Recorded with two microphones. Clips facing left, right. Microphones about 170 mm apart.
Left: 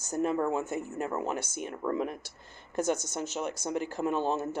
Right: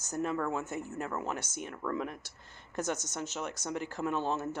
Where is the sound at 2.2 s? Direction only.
10° left (ahead or behind).